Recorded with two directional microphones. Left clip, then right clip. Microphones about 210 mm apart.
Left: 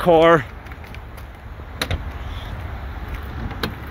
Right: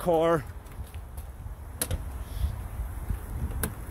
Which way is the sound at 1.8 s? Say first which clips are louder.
Left 11 dB; 10° left (ahead or behind).